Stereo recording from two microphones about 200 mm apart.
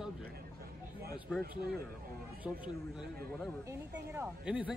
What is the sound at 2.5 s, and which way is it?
A man's voice, 5° right (ahead or behind).